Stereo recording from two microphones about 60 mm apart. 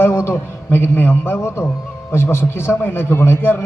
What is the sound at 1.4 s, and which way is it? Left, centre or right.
A man's voice, left.